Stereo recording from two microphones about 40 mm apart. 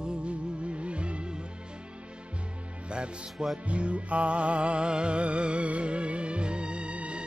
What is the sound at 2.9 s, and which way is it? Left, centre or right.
Music, right.